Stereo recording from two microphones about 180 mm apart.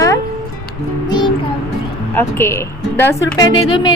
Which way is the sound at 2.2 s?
10° left (ahead or behind).